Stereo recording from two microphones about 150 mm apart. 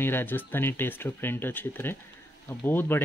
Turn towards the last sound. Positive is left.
turn(degrees=15)  # may be behind; listen again after turning